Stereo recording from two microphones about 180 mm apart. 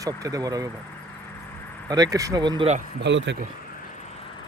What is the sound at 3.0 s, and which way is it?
Speech, 85° right.